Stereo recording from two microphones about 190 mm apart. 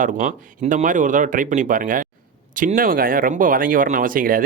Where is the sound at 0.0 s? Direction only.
40° right (ahead or behind).